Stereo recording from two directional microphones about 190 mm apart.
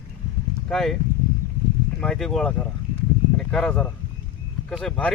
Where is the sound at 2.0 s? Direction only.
5° left (ahead or behind).